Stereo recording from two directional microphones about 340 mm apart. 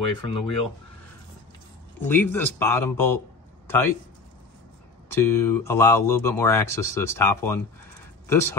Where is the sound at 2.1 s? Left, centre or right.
Centre.